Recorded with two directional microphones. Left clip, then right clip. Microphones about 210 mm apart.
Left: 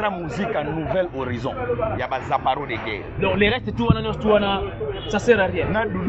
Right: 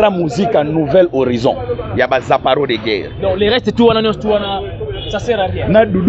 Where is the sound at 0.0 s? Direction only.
50° right (ahead or behind).